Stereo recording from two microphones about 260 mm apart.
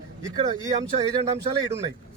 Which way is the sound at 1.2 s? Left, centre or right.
Centre.